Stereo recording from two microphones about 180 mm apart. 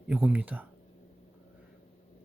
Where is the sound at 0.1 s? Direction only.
5° right (ahead or behind).